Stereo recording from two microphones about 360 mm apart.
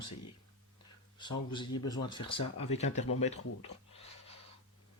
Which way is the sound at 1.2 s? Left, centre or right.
Centre.